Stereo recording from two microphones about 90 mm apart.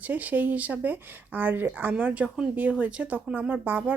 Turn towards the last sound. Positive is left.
turn(degrees=-20)  # may be behind; listen again after turning